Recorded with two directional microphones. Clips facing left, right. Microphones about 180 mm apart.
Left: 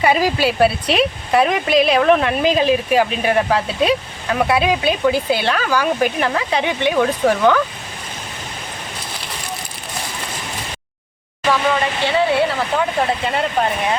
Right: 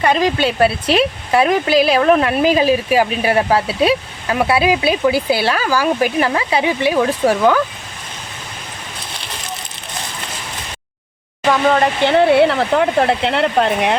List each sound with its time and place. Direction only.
0.0 s speech: 5° left (ahead or behind)
11.7 s speech: 55° right (ahead or behind); by 13.9 s 70° right (ahead or behind)